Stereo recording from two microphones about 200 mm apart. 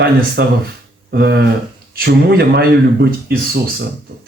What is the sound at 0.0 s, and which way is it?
Speech, 55° right (ahead or behind).